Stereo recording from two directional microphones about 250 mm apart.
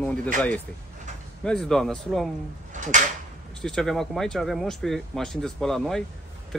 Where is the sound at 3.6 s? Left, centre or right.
Centre.